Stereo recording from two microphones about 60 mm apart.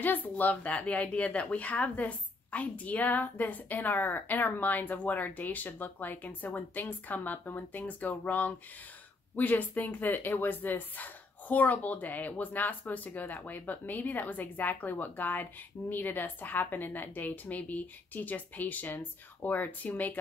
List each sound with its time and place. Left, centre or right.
0.0 s a woman's voice: left